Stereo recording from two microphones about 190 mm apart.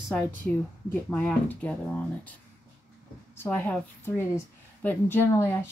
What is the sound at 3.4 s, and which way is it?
A woman's voice, 10° left (ahead or behind).